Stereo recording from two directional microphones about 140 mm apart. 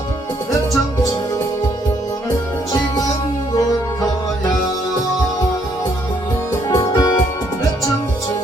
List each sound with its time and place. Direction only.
6.7 s music: 25° left (ahead or behind)